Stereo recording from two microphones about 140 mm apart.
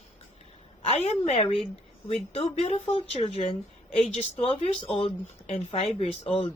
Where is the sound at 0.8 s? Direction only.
50° left (ahead or behind).